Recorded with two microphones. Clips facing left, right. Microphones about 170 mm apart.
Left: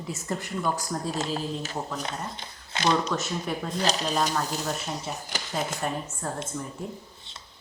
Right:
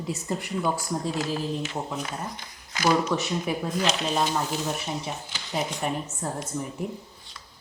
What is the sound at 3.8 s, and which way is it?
Speech, 35° left (ahead or behind).